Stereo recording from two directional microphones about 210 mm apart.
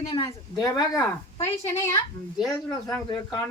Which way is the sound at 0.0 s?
25° left (ahead or behind).